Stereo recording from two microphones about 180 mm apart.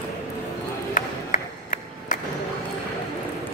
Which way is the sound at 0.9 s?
45° left (ahead or behind).